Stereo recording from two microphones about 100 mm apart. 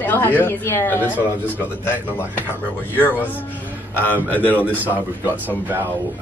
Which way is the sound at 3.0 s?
20° left (ahead or behind).